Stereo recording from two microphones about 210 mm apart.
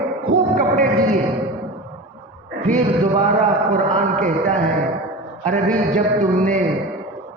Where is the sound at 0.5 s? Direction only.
40° right (ahead or behind).